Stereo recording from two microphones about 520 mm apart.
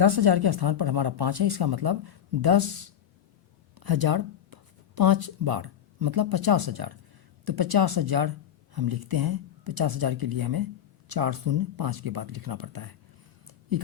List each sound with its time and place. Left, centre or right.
0.0 s speech: right